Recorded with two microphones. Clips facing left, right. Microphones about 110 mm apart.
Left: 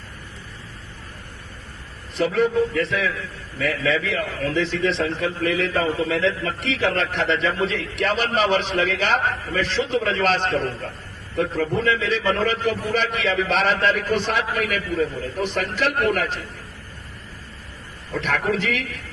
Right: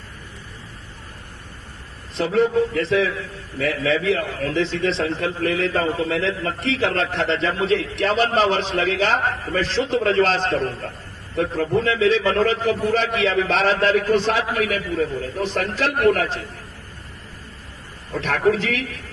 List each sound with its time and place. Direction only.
2.1 s a man's voice: 30° right (ahead or behind)
11.8 s a man's voice: 30° right (ahead or behind)
18.1 s a man's voice: 35° right (ahead or behind)